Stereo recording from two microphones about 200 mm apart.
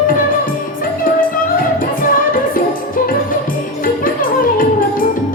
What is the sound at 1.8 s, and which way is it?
Music, 45° left (ahead or behind).